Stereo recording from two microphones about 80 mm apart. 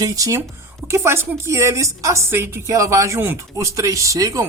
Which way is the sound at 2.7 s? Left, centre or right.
Right.